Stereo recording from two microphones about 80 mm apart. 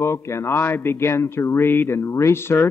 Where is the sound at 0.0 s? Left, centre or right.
Left.